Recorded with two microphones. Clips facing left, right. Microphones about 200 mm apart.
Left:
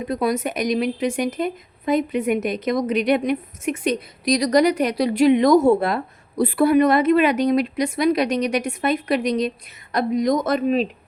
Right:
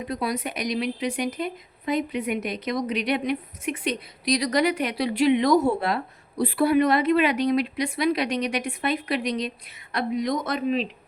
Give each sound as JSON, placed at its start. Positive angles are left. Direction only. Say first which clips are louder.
{"t": 0.1, "sound": "a woman's voice", "louder": "left 7 dB", "side_deg": 45}